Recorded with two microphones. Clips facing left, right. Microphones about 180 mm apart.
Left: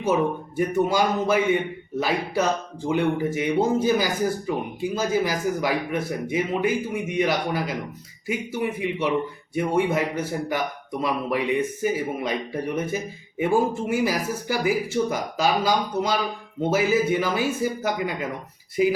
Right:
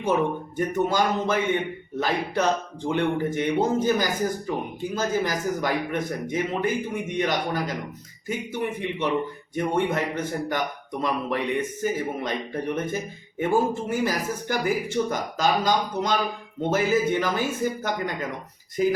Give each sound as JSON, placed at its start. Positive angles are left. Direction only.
{"t": 0.0, "sound": "speech", "side_deg": 10}